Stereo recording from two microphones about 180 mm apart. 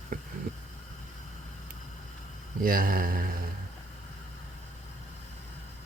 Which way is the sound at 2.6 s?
50° right (ahead or behind).